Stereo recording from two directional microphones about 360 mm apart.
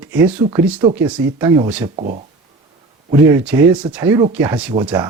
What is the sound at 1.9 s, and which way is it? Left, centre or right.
Speech, centre.